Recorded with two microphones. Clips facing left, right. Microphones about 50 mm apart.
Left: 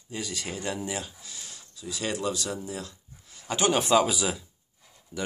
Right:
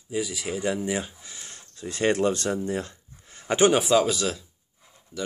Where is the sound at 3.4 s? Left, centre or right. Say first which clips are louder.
Right 6 dB; right.